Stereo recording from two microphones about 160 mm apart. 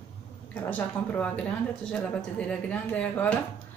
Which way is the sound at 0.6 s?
10° left (ahead or behind).